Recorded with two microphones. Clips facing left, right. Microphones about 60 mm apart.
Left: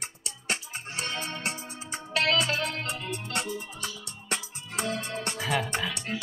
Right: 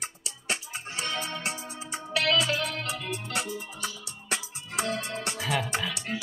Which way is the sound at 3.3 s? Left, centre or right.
Centre.